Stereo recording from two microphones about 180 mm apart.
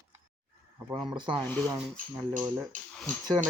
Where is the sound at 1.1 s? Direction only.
25° right (ahead or behind).